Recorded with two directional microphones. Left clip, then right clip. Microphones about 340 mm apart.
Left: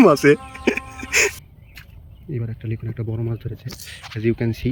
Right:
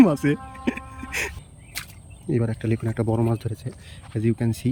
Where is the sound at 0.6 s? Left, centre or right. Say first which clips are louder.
Left 7 dB; centre.